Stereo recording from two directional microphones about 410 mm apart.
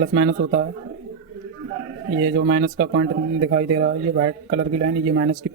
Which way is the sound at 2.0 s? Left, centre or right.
Right.